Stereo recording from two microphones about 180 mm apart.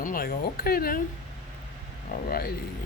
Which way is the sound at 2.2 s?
55° left (ahead or behind).